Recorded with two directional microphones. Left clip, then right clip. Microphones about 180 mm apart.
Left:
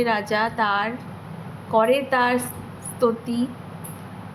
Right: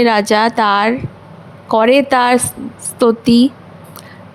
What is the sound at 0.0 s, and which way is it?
A woman's voice, 55° right (ahead or behind).